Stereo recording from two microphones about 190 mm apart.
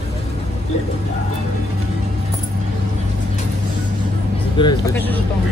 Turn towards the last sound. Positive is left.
turn(degrees=25)  # may be behind; listen again after turning